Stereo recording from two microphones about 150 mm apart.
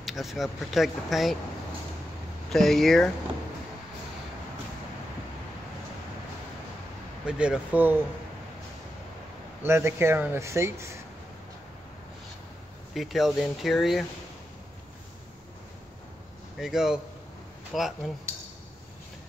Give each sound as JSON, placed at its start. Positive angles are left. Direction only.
{"t": 0.0, "sound": "speech", "side_deg": 0}
{"t": 2.5, "sound": "speech", "side_deg": 5}
{"t": 7.2, "sound": "speech", "side_deg": -5}
{"t": 9.6, "sound": "speech", "side_deg": -15}
{"t": 12.9, "sound": "speech", "side_deg": 0}
{"t": 16.5, "sound": "speech", "side_deg": 0}